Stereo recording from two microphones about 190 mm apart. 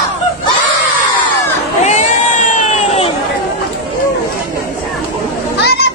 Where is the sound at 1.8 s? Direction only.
35° left (ahead or behind).